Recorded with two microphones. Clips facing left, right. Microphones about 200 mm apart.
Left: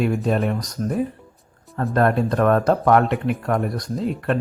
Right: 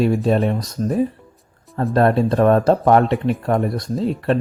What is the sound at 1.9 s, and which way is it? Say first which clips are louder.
Speech: right 3 dB; 30° right (ahead or behind).